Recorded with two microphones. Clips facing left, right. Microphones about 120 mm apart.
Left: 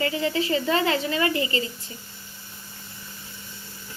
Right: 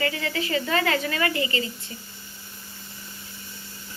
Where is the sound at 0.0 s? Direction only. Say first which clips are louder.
Left 3 dB; 30° left (ahead or behind).